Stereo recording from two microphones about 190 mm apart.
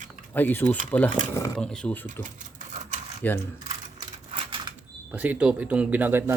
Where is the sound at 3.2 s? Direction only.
10° left (ahead or behind).